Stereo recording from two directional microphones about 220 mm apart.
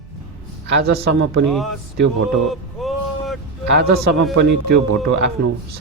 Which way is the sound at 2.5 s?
Centre (ahead or behind).